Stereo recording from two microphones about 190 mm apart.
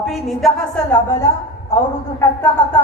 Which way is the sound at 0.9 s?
15° left (ahead or behind).